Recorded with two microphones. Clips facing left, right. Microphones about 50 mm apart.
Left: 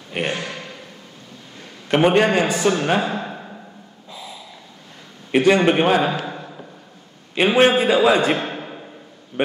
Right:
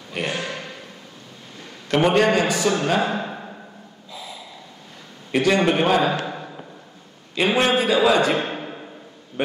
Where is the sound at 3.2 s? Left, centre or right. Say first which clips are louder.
Even; centre.